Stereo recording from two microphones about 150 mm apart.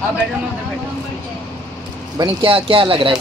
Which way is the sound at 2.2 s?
35° right (ahead or behind).